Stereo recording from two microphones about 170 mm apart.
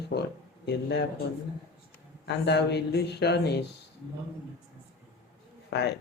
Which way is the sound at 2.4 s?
85° left.